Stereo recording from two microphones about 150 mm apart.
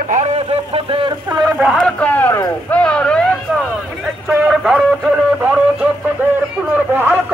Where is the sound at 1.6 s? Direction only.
Centre (ahead or behind).